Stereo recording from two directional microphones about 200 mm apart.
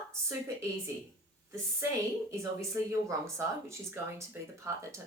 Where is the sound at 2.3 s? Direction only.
15° right (ahead or behind).